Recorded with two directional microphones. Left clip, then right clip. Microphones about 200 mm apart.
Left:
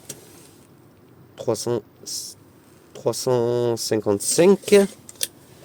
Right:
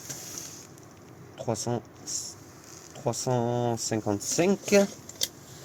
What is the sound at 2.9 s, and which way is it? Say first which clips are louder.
Speech: left 7 dB; 55° left (ahead or behind).